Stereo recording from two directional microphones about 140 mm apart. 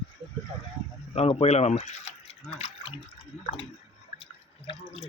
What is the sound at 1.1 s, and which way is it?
Speech, 50° left (ahead or behind).